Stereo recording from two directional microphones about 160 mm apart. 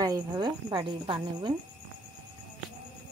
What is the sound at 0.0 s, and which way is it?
Speech, 25° right (ahead or behind).